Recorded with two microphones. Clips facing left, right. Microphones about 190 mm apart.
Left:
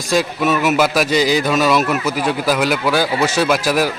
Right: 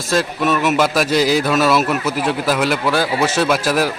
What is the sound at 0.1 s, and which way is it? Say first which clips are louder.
Speech: left 1 dB; centre (ahead or behind).